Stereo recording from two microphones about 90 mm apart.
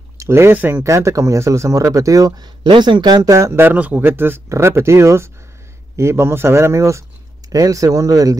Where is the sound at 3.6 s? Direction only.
20° right (ahead or behind).